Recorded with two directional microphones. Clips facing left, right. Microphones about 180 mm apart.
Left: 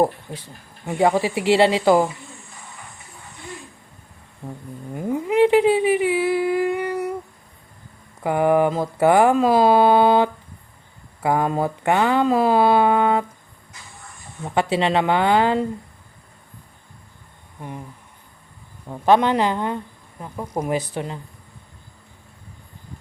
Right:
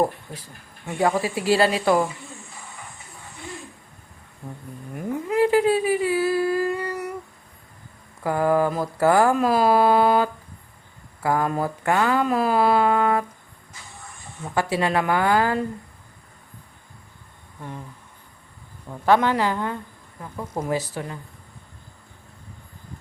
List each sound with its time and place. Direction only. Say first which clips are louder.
0.0 s speech: left 3 dB; 25° left (ahead or behind)
4.9 s whale vocalization: left 4 dB; 25° left (ahead or behind)
8.2 s speech: left 3 dB; 20° left (ahead or behind)
14.4 s speech: left 3 dB; 25° left (ahead or behind)
17.6 s a sound: left 2 dB; 15° left (ahead or behind)
18.9 s speech: left 2 dB; 20° left (ahead or behind)